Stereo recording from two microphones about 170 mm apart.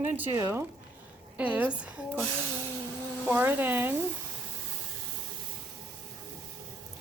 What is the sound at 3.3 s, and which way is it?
Speech, 10° right (ahead or behind).